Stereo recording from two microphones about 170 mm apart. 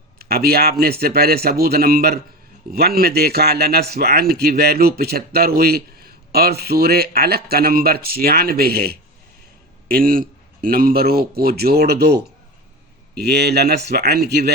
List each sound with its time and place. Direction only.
0.2 s speech: 65° right (ahead or behind)